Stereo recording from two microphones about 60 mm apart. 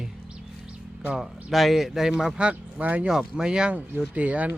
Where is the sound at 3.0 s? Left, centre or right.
Centre.